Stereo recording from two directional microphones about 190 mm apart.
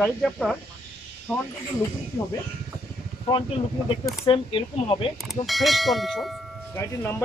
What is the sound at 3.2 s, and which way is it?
Speech, 25° left (ahead or behind).